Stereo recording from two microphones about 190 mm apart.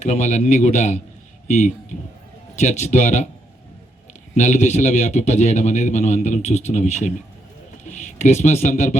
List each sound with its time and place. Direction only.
0.0 s a man's voice: 40° left (ahead or behind)
4.4 s a man's voice: 35° left (ahead or behind)